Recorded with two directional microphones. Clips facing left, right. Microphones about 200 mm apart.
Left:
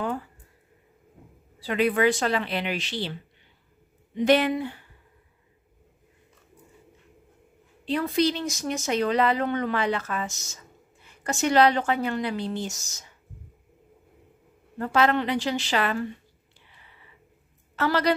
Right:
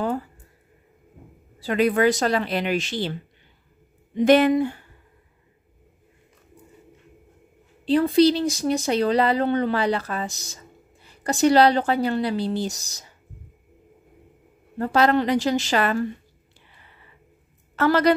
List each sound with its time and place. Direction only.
1.6 s speech: 40° right (ahead or behind)
7.8 s speech: 30° right (ahead or behind)
14.8 s speech: 35° right (ahead or behind)
17.7 s speech: 50° right (ahead or behind)